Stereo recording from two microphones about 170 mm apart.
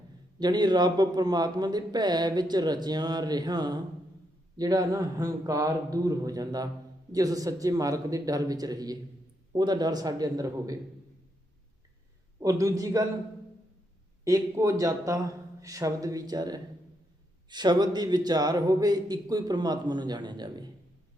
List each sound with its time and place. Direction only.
0.3 s speech: 25° right (ahead or behind)
12.4 s speech: 20° right (ahead or behind)
14.3 s speech: 20° right (ahead or behind)